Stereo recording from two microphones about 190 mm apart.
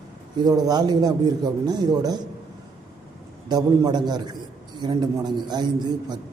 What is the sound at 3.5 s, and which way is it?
Speech, 20° right (ahead or behind).